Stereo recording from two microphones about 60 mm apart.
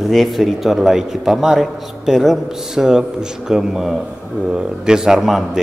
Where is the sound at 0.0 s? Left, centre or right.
Centre.